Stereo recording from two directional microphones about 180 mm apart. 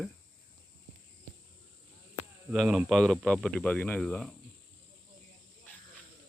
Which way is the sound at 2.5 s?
5° right (ahead or behind).